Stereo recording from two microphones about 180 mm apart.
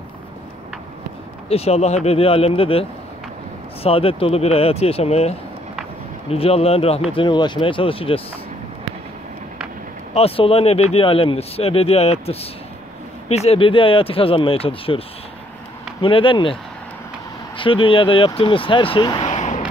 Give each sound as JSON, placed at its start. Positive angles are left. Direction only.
{"t": 1.5, "sound": "speech", "side_deg": 35}
{"t": 6.3, "sound": "speech", "side_deg": 35}
{"t": 10.1, "sound": "speech", "side_deg": 30}
{"t": 17.6, "sound": "speech", "side_deg": 30}